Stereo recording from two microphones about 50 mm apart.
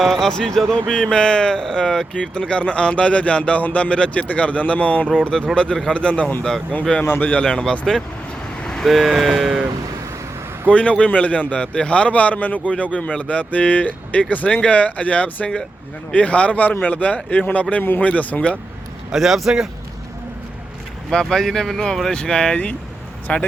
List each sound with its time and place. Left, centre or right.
0.0 s a man's voice: centre; by 5.1 s left
5.3 s speech: centre
5.9 s a man's voice: left
7.2 s speech: left
7.4 s speech: centre
8.8 s speech: centre
10.7 s a man's voice: left
19.1 s speech: centre
21.1 s speech: centre
23.2 s speech: left